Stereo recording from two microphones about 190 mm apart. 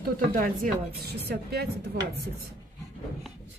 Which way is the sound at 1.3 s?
55° right (ahead or behind).